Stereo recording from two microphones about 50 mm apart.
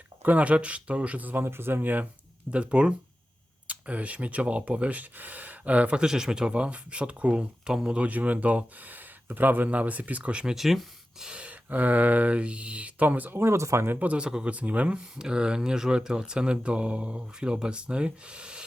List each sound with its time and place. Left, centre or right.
0.2 s speech: right
1.4 s speech: right
2.5 s speech: right
8.0 s speech: right
10.4 s speech: centre
11.3 s gasp: right
11.7 s speech: right
13.3 s speech: right
13.6 s speech: right
14.0 s speech: right
14.3 s speech: centre
14.5 s speech: right
15.1 s speech: centre